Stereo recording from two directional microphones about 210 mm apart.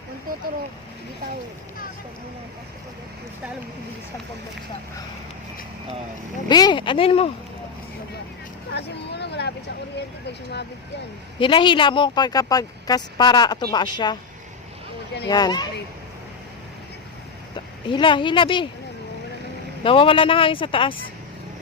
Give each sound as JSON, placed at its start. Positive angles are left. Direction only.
{"t": 6.5, "sound": "speech", "side_deg": 20}
{"t": 8.7, "sound": "vehicle", "side_deg": 55}
{"t": 10.2, "sound": "speech", "side_deg": 55}
{"t": 11.3, "sound": "speech", "side_deg": 25}
{"t": 15.3, "sound": "speech", "side_deg": 20}
{"t": 17.8, "sound": "speech", "side_deg": 25}
{"t": 19.8, "sound": "speech", "side_deg": 25}